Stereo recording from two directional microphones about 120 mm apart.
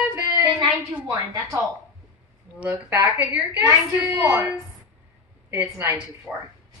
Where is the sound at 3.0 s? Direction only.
30° right (ahead or behind).